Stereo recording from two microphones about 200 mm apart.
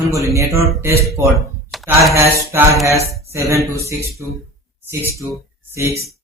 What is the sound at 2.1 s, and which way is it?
Speech, 15° right (ahead or behind).